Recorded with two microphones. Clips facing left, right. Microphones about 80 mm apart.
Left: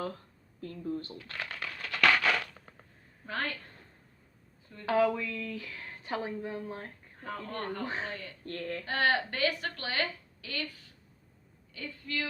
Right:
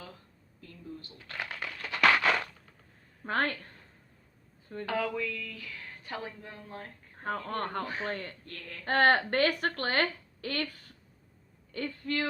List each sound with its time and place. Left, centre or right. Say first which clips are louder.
0.6 s speech: left 9 dB; left
1.4 s a sound: right 2 dB; centre
3.2 s speech: right 5 dB; right
4.7 s speech: right 10 dB; right
5.1 s speech: even; left
7.2 s speech: right 4 dB; right
8.4 s a sound: left 9 dB; left
8.8 s speech: right 5 dB; right
11.7 s speech: right 5 dB; right